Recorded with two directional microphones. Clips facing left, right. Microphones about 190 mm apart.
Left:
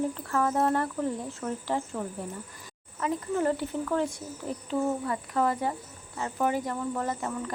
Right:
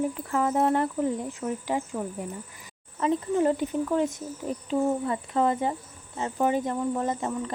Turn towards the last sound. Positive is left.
turn(degrees=-20)  # may be behind; listen again after turning